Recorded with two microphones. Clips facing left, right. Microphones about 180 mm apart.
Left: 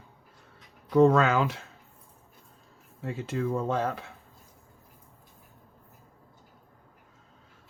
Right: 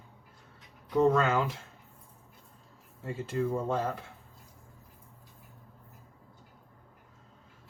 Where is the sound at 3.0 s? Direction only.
85° left.